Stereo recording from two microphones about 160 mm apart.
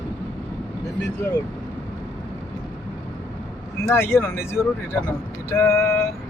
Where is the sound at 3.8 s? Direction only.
15° left (ahead or behind).